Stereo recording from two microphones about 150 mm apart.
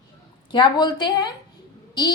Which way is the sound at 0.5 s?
30° left (ahead or behind).